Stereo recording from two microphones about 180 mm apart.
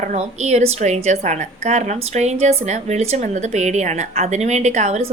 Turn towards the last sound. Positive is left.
turn(degrees=-40)  # may be behind; listen again after turning